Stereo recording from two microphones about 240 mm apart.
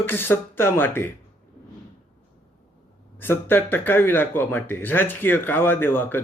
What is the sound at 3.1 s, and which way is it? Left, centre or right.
Speech, centre.